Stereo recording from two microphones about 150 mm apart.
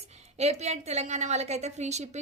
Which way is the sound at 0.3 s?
45° right (ahead or behind).